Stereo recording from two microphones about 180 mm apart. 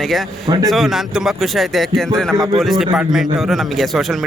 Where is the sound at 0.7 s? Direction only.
Centre (ahead or behind).